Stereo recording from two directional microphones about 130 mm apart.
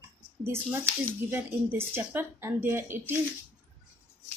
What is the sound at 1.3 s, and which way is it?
Speech, 15° right (ahead or behind).